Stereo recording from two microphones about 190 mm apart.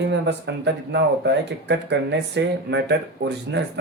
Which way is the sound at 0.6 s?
65° right (ahead or behind).